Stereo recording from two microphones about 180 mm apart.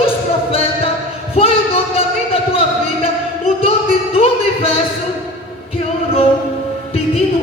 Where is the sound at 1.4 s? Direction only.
30° left (ahead or behind).